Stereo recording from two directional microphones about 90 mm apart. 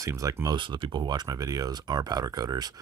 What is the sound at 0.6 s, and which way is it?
Speech, 60° right (ahead or behind).